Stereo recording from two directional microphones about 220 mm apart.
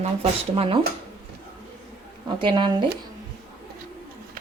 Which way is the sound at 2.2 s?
20° right (ahead or behind).